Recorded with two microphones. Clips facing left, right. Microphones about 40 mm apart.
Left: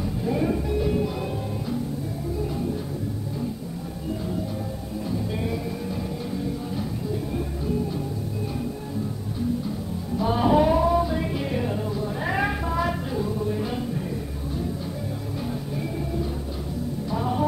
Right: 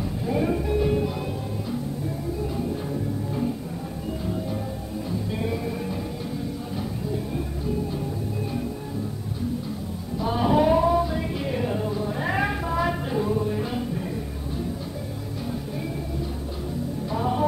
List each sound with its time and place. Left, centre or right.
0.2 s music: centre
5.4 s music: centre
10.1 s music: centre
13.1 s music: right
13.5 s music: centre
17.1 s music: centre